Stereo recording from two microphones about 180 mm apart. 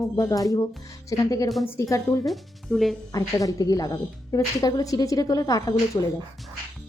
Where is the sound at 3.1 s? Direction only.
20° left (ahead or behind).